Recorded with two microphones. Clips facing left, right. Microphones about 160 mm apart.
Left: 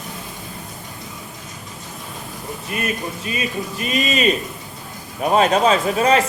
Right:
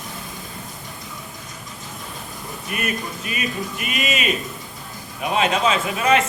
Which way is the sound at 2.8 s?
30° left (ahead or behind).